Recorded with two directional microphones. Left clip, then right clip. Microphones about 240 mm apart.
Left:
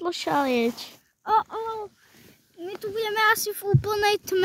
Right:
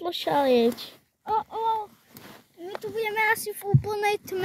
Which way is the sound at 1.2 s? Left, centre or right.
Left.